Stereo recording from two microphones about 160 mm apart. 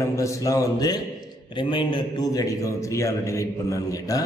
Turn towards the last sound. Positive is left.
turn(degrees=20)  # may be behind; listen again after turning